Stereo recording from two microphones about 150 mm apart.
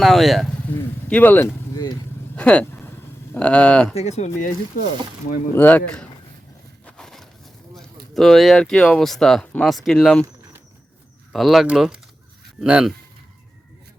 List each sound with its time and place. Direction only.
0.0 s speech: centre (ahead or behind)
1.0 s speech: 10° left (ahead or behind)
2.3 s vehicle: 10° left (ahead or behind)
3.3 s speech: 10° left (ahead or behind)
3.9 s speech: 45° left (ahead or behind)
5.5 s speech: 10° left (ahead or behind)
6.8 s a sound: 5° left (ahead or behind)
8.1 s speech: centre (ahead or behind)
11.3 s speech: centre (ahead or behind)